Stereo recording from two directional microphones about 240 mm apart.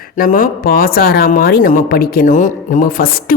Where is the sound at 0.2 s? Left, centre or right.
Left.